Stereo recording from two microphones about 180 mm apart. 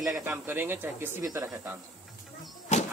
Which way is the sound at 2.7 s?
40° left (ahead or behind).